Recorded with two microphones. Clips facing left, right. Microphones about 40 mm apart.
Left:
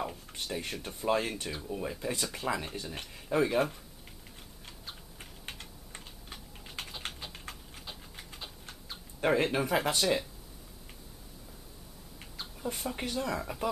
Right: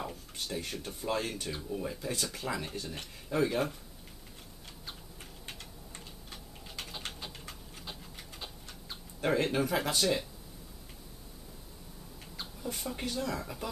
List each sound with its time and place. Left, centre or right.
0.0 s speech: centre
1.8 s speech: centre
5.5 s typing: centre
7.1 s typing: centre
7.3 s a sound: centre
9.2 s speech: centre
12.4 s rodents: centre
12.9 s speech: centre